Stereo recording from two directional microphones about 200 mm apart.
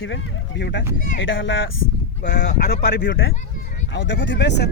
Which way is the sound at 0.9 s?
40° left (ahead or behind).